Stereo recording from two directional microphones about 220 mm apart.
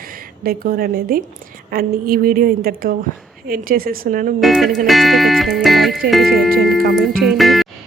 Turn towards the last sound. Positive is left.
turn(degrees=0)  # may be behind; listen again after turning